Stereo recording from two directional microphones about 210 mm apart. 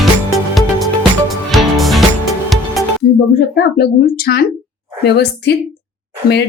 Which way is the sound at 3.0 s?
50° left (ahead or behind).